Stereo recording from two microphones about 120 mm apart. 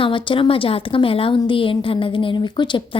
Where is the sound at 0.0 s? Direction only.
45° left (ahead or behind).